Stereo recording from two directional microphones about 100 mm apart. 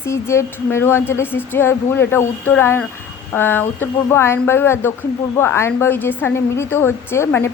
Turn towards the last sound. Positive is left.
turn(degrees=25)  # may be behind; listen again after turning